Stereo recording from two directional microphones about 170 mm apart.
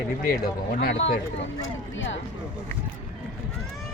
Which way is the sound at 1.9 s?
90° left.